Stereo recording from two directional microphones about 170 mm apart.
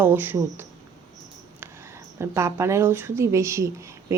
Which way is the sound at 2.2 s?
15° right (ahead or behind).